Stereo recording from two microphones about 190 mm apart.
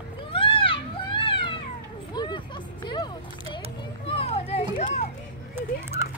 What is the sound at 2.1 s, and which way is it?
Music, 25° left (ahead or behind).